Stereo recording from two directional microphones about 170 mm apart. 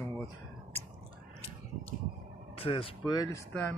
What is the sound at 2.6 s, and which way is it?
Speech, 30° left (ahead or behind).